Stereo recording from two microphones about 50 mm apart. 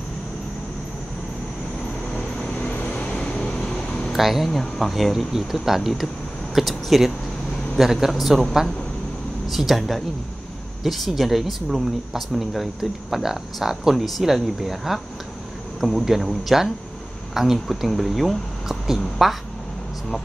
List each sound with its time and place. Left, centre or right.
2.6 s vehicle: left; by 4.1 s centre
4.1 s speech: centre
9.5 s speech: centre